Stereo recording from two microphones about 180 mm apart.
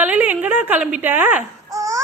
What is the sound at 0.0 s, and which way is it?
Baby cry, 10° right (ahead or behind).